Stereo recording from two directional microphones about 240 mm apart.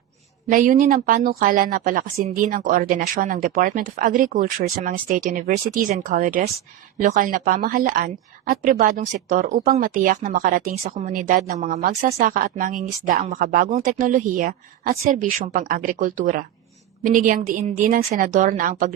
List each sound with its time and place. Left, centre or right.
0.5 s a woman's voice: right